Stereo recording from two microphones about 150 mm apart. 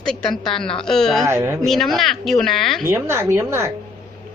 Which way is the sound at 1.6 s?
Centre (ahead or behind).